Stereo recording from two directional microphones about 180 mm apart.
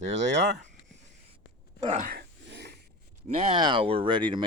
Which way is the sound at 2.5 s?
70° right (ahead or behind).